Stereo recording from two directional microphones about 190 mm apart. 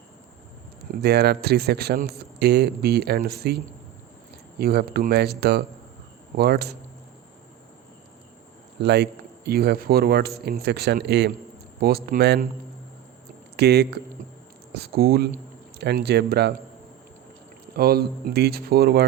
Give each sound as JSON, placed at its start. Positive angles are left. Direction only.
{"t": 1.0, "sound": "a man's voice", "side_deg": -60}
{"t": 8.8, "sound": "a man's voice", "side_deg": -60}
{"t": 13.6, "sound": "a man's voice", "side_deg": -60}
{"t": 17.7, "sound": "a man's voice", "side_deg": -55}